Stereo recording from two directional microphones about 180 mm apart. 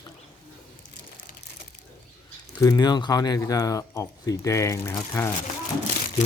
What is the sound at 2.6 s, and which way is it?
Speech, 20° left (ahead or behind).